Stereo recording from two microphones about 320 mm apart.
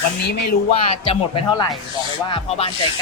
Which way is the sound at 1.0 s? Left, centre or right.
Centre.